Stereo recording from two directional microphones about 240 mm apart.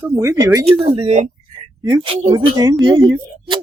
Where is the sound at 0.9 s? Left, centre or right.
Right.